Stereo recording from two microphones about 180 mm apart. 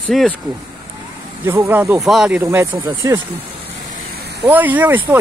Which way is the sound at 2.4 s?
15° right (ahead or behind).